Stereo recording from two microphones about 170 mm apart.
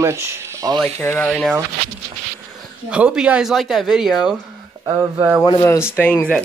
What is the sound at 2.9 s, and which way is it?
Speech, 5° right (ahead or behind).